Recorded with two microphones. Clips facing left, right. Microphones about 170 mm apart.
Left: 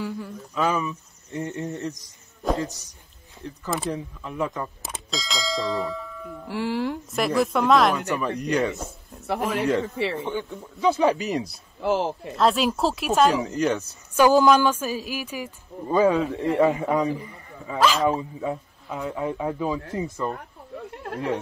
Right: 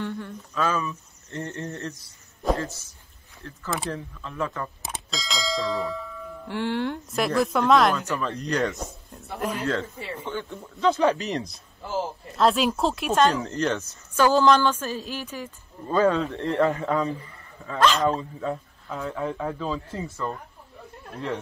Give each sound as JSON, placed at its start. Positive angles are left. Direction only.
{"t": 0.0, "sound": "speech", "side_deg": 5}
{"t": 0.6, "sound": "a woman's voice", "side_deg": 15}
{"t": 4.8, "sound": "speech", "side_deg": 0}
{"t": 8.1, "sound": "a woman's voice", "side_deg": 10}
{"t": 8.5, "sound": "speech", "side_deg": 0}
{"t": 9.9, "sound": "speech", "side_deg": 80}
{"t": 10.2, "sound": "a woman's voice", "side_deg": 10}
{"t": 11.5, "sound": "speech", "side_deg": 80}
{"t": 12.4, "sound": "speech", "side_deg": 0}
{"t": 13.6, "sound": "a woman's voice", "side_deg": 15}
{"t": 20.9, "sound": "a sound", "side_deg": 80}